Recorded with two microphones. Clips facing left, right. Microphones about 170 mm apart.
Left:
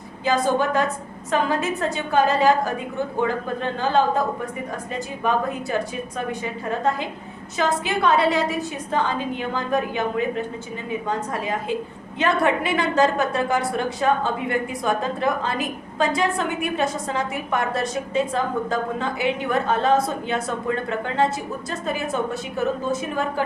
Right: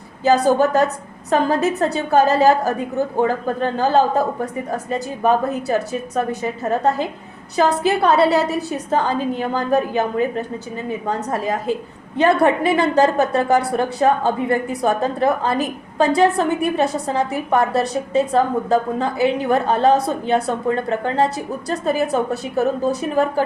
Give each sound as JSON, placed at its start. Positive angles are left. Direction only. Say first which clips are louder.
{"t": 0.4, "sound": "a woman's voice", "louder": "right 5 dB", "side_deg": -40}